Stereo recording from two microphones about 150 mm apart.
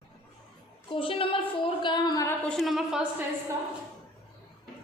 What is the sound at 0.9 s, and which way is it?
A woman's voice, 35° left (ahead or behind).